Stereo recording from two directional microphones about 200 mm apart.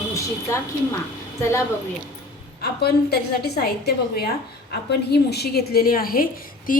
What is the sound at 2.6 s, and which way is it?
A woman's voice, 55° left (ahead or behind).